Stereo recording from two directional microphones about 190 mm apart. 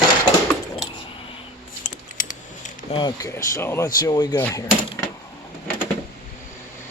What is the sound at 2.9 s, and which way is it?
Speech, 20° left (ahead or behind).